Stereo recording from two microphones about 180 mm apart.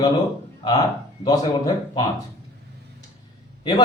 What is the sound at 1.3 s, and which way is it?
Speech, 20° left (ahead or behind).